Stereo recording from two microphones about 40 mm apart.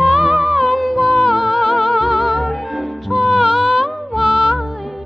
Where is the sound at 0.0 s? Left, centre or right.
Centre.